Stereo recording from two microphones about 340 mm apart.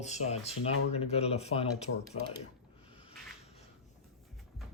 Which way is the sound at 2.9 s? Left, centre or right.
Centre.